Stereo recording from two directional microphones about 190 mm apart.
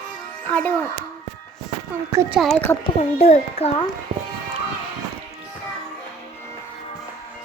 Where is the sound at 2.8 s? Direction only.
35° left (ahead or behind).